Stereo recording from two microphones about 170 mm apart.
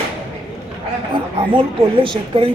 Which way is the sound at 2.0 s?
30° right (ahead or behind).